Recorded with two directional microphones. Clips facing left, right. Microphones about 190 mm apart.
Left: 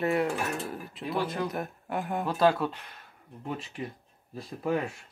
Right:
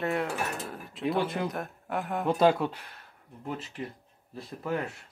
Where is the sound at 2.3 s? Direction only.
20° right (ahead or behind).